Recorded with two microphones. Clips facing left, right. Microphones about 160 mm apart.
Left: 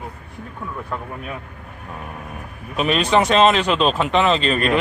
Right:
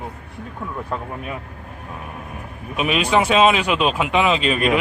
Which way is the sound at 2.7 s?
5° right (ahead or behind).